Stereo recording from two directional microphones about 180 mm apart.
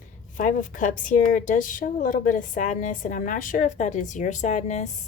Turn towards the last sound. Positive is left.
turn(degrees=40)  # may be behind; listen again after turning